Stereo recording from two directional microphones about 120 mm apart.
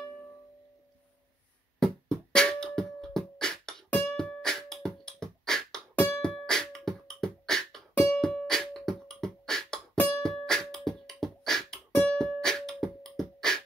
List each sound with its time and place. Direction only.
1.8 s beatboxing: 5° left (ahead or behind)
4.2 s music: 5° left (ahead or behind)
9.9 s music: 15° left (ahead or behind)
10.2 s music: 5° left (ahead or behind)